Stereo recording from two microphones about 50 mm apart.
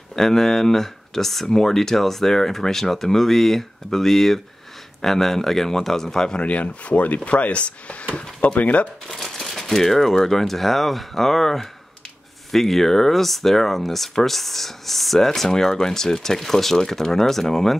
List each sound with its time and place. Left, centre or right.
0.1 s speech: centre
6.4 s speech: left
9.0 s speech: centre